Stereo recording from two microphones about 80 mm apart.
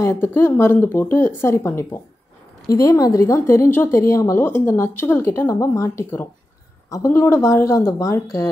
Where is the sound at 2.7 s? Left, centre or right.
Left.